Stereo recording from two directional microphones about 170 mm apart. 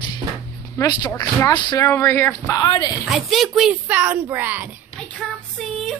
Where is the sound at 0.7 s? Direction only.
20° left (ahead or behind).